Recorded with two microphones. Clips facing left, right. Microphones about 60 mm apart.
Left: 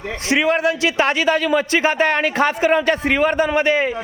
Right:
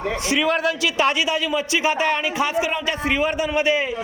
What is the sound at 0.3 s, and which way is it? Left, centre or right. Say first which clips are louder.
A man's voice: left 4 dB; left.